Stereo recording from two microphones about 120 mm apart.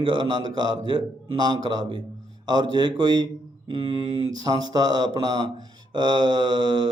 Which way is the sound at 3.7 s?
50° right (ahead or behind).